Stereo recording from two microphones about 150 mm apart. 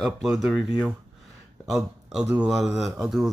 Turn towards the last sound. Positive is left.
turn(degrees=0)  # may be behind; listen again after turning